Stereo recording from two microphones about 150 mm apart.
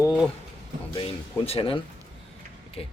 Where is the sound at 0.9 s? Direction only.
35° left (ahead or behind).